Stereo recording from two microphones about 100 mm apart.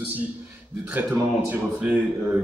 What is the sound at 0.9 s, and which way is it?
Speech, 15° right (ahead or behind).